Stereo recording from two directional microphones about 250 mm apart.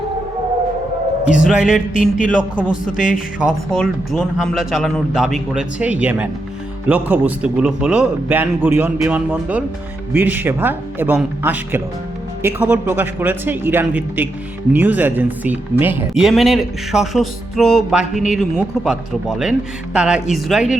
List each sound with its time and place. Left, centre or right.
1.5 s speech: centre
1.9 s speech: left
2.6 s a man's voice: centre
2.9 s speech: left
3.7 s a man's voice: centre